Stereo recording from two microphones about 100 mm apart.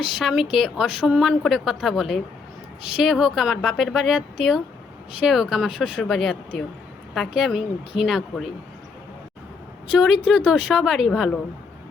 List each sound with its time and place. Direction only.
0.0 s speech: centre (ahead or behind)
10.2 s speech: 10° right (ahead or behind)